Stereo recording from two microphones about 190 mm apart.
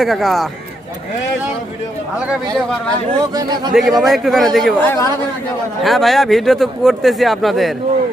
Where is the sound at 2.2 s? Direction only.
5° right (ahead or behind).